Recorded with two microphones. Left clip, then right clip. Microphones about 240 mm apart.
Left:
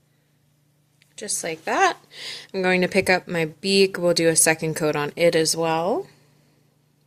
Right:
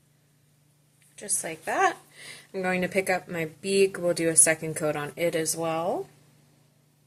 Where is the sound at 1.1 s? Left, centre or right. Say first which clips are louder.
Left 6 dB; left.